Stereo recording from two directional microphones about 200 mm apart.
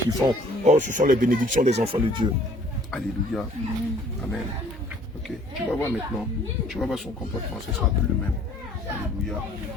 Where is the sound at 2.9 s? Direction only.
Centre (ahead or behind).